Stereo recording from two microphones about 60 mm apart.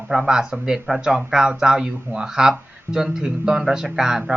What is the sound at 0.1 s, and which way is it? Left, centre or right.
Speech, centre.